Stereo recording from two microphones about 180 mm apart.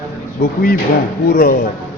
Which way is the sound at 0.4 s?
55° left (ahead or behind).